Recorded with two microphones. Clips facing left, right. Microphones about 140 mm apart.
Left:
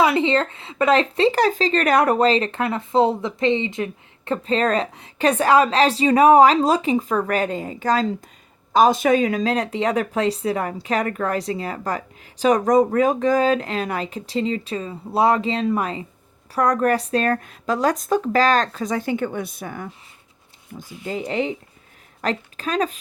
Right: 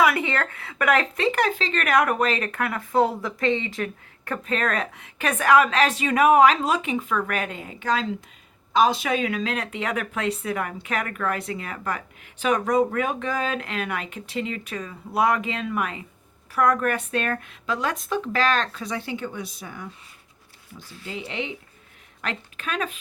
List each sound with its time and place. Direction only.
0.0 s speech: 25° left (ahead or behind); by 19.9 s 50° left (ahead or behind)
20.7 s speech: 40° left (ahead or behind)